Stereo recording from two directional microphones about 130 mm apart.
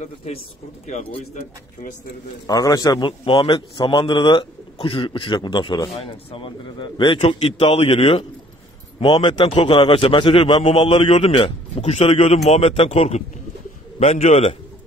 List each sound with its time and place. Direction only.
0.0 s a man's voice: 55° left (ahead or behind)
2.4 s a man's voice: 30° left (ahead or behind)
3.1 s a man's voice: 40° left (ahead or behind)
9.0 s a man's voice: 35° left (ahead or behind); by 14.5 s 65° left (ahead or behind)